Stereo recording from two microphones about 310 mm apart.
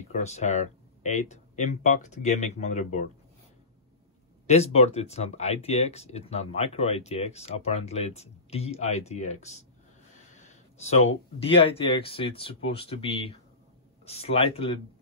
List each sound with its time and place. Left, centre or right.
0.1 s speech: left
4.5 s speech: centre